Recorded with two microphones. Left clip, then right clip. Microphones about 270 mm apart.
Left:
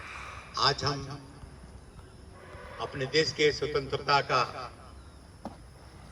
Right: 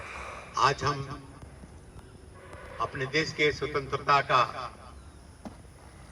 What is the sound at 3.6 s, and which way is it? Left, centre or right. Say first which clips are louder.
Speech: even; centre.